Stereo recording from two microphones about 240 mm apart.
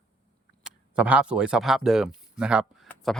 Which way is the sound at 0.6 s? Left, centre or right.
Centre.